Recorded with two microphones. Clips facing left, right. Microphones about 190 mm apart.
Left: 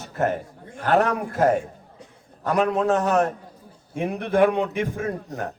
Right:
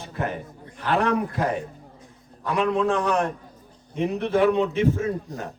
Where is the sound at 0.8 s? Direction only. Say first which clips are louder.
Left 2 dB; 45° left (ahead or behind).